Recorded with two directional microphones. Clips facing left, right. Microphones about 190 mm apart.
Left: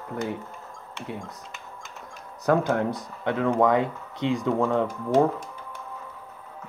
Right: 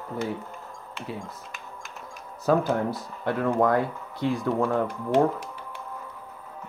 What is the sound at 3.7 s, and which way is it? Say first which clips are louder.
Speech: left 1 dB; 20° left (ahead or behind).